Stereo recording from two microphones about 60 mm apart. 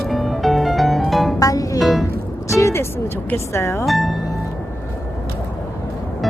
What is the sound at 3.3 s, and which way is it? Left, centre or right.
Speech, left.